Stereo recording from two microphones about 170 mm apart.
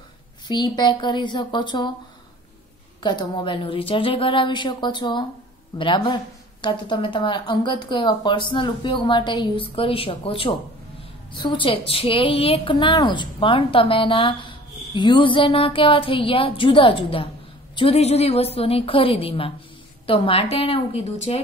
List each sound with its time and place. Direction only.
0.5 s speech: 25° left (ahead or behind)
3.0 s a woman's voice: 25° left (ahead or behind)